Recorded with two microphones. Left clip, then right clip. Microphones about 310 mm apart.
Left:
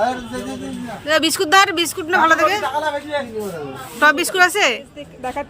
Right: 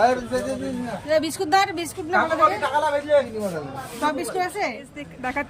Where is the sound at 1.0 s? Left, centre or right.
Centre.